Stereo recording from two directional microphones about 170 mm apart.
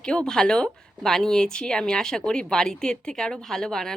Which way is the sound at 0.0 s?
5° left (ahead or behind).